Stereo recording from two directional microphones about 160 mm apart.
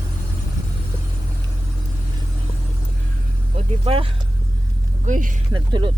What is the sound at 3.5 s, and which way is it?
Vehicle, 35° right (ahead or behind).